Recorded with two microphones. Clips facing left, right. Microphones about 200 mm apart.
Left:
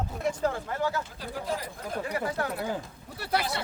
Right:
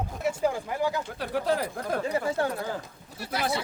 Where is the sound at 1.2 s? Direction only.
70° right (ahead or behind).